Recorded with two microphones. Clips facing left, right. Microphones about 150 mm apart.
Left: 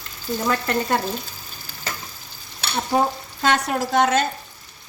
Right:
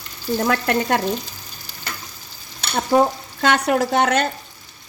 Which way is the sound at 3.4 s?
70° right (ahead or behind).